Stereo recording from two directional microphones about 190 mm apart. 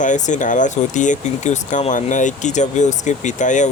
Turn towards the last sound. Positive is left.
turn(degrees=40)  # may be behind; listen again after turning